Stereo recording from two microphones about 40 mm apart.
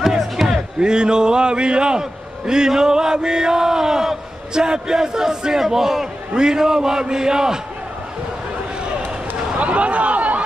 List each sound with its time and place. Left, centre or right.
0.2 s music: centre
0.7 s a man's voice: centre
9.6 s speech: right